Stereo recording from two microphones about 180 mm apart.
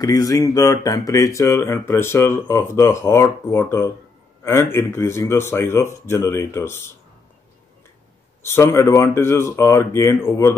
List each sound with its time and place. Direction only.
0.0 s speech: 20° left (ahead or behind)
8.5 s speech: 15° left (ahead or behind)